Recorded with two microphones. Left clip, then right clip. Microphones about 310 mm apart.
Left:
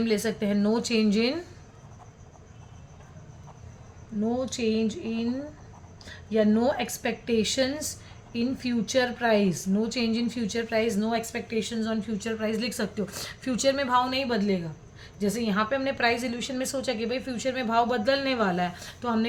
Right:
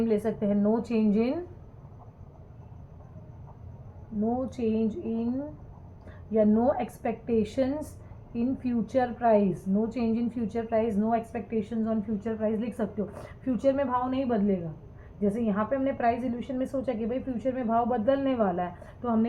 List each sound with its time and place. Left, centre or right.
0.0 s a woman's voice: left
4.2 s a woman's voice: left